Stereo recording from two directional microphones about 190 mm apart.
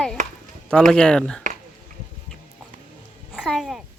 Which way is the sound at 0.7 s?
5° left (ahead or behind).